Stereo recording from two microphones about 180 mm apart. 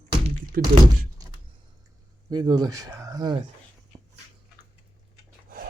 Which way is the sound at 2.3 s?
25° right (ahead or behind).